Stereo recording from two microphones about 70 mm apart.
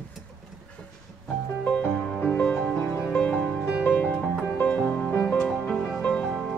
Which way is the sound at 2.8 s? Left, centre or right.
Left.